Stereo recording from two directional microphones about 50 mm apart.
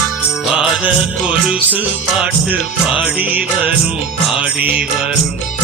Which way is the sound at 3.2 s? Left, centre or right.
Right.